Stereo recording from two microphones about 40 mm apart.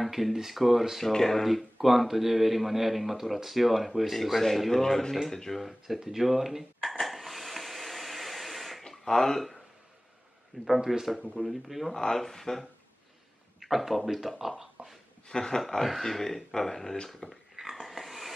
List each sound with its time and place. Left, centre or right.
0.0 s speech: centre
1.0 s speech: centre
5.9 s speech: centre
6.8 s a sound: centre
8.8 s a sound: centre
10.6 s speech: centre
11.9 s speech: centre
13.6 s speech: centre
14.8 s speech: right
15.2 s speech: centre
15.8 s speech: centre
17.6 s dog: centre